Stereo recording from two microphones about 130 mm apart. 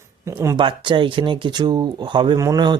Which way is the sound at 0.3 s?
20° right (ahead or behind).